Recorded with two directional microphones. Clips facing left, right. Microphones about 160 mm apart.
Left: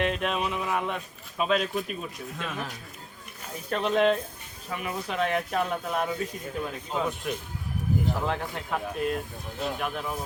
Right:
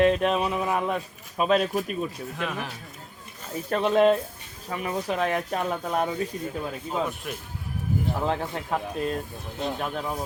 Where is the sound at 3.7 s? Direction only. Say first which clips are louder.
Right 3 dB; 40° right (ahead or behind).